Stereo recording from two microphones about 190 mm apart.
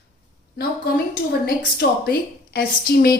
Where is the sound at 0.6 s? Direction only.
55° left (ahead or behind).